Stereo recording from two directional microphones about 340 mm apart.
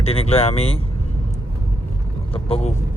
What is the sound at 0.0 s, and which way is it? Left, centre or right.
Speech, centre.